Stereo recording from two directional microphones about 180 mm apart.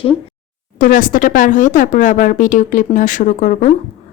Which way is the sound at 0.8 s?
50° left (ahead or behind).